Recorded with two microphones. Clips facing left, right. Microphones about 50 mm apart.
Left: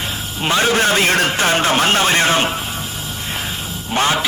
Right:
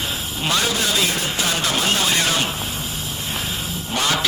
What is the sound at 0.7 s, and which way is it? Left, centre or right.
Music, left.